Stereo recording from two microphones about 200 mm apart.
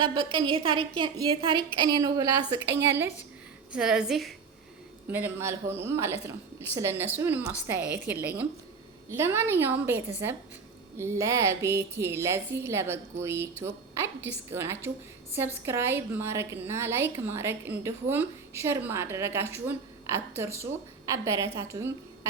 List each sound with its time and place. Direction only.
0.0 s a woman's voice: 25° right (ahead or behind); by 4.4 s centre (ahead or behind)
5.1 s a woman's voice: 10° right (ahead or behind)